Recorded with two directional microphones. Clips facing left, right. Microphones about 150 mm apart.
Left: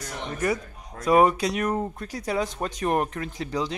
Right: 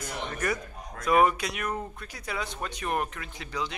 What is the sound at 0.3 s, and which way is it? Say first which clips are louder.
Speech: left 6 dB; 25° left (ahead or behind).